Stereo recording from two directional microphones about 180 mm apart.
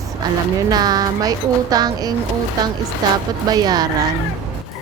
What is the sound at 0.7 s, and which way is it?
Speech, 20° right (ahead or behind).